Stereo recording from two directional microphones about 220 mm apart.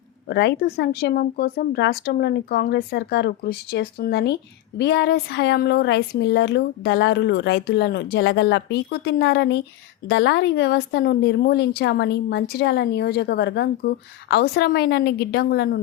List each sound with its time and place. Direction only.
0.3 s a woman's voice: 50° left (ahead or behind)